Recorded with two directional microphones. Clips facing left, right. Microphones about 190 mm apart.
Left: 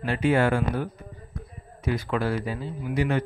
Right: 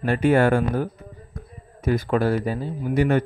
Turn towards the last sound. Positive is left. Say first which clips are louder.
# right 5 dB
turn(degrees=-50)  # may be behind; listen again after turning